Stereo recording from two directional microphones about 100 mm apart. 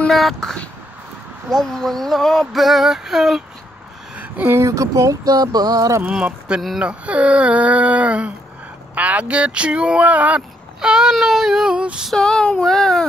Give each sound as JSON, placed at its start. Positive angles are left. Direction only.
{"t": 0.1, "sound": "speech", "side_deg": 0}
{"t": 4.2, "sound": "a sound", "side_deg": -15}
{"t": 4.6, "sound": "speech", "side_deg": -30}
{"t": 6.0, "sound": "speech", "side_deg": -10}
{"t": 12.1, "sound": "speech", "side_deg": 5}